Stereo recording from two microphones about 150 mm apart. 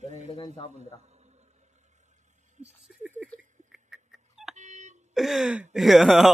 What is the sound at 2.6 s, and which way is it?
Speech, 55° right (ahead or behind).